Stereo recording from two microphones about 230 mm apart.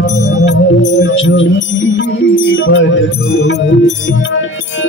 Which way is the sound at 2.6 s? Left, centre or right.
Left.